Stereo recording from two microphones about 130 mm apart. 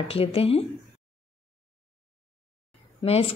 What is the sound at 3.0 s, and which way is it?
Speech, 50° left (ahead or behind).